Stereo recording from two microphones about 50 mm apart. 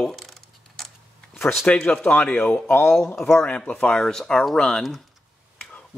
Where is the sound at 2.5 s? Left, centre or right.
Left.